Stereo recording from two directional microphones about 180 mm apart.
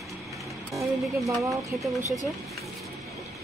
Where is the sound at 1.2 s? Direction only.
Centre (ahead or behind).